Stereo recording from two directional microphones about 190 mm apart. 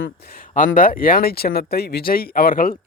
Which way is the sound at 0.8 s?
50° left (ahead or behind).